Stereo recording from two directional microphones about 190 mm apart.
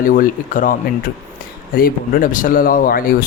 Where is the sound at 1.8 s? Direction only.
45° left (ahead or behind).